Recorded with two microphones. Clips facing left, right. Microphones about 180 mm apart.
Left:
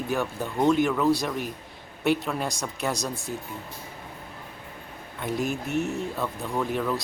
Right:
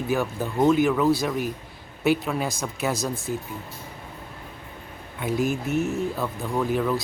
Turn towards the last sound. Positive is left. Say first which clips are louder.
# right 3 dB
turn(degrees=0)  # may be behind; listen again after turning